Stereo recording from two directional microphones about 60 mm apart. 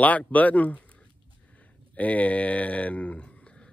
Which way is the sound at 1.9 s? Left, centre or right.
Left.